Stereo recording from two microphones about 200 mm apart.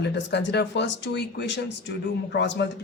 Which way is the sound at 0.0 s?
60° left (ahead or behind).